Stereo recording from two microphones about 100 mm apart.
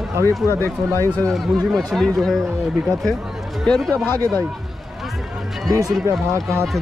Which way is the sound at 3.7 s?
5° left (ahead or behind).